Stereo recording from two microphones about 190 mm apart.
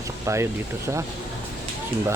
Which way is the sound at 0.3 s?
15° right (ahead or behind).